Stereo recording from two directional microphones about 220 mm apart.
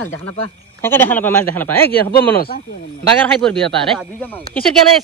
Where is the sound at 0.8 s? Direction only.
10° left (ahead or behind).